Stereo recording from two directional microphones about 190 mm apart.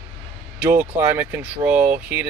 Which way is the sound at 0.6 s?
10° right (ahead or behind).